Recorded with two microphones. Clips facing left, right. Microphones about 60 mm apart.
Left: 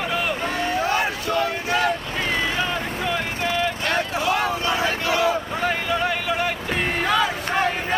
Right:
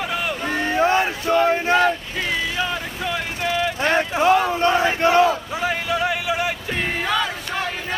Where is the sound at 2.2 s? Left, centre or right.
Left.